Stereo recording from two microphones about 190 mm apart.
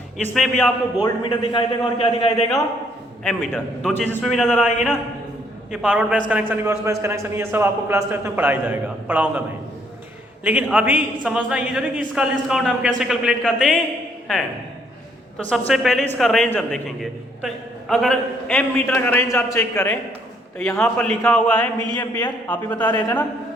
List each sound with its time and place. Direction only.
0.3 s a man's voice: centre (ahead or behind)
1.0 s a man's voice: 25° left (ahead or behind)
3.2 s a man's voice: 5° left (ahead or behind)
10.4 s a man's voice: 10° right (ahead or behind)
15.4 s a man's voice: 5° left (ahead or behind)